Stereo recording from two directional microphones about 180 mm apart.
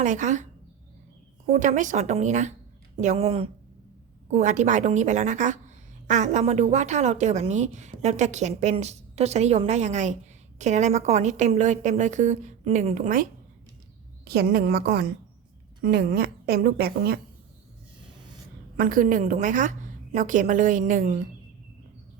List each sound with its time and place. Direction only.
0.0 s a woman's voice: 45° right (ahead or behind)
1.5 s a woman's voice: 45° right (ahead or behind)
14.3 s a woman's voice: 60° right (ahead or behind)
18.8 s a woman's voice: 50° right (ahead or behind)